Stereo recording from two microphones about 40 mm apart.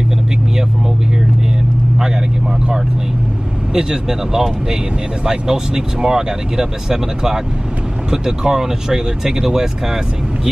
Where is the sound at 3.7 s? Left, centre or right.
Centre.